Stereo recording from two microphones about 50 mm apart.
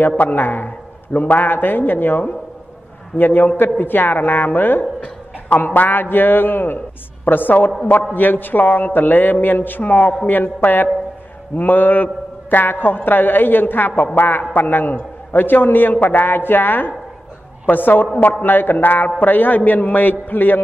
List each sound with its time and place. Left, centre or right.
0.2 s a man's voice: left